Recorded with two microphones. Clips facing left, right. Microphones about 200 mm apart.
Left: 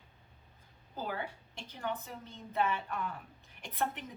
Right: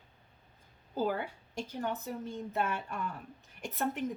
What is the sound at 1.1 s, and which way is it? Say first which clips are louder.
A woman's voice: right 4 dB; 45° right (ahead or behind).